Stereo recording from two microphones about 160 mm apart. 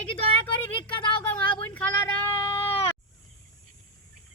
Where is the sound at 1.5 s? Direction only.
10° left (ahead or behind).